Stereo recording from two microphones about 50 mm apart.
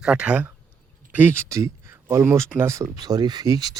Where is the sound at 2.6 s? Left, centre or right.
Right.